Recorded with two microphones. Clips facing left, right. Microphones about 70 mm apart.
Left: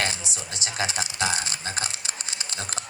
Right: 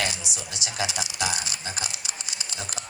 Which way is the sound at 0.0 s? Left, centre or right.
Left.